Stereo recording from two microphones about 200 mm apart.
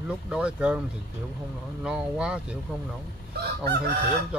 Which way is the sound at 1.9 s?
5° right (ahead or behind).